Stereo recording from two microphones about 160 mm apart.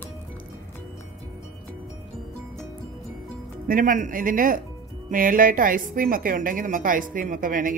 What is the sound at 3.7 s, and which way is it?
A woman's voice, 60° right (ahead or behind).